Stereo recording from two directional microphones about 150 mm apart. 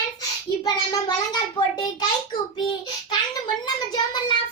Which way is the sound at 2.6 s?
30° left (ahead or behind).